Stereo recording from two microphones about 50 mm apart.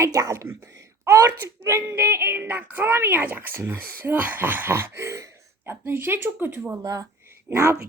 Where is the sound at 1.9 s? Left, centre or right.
Right.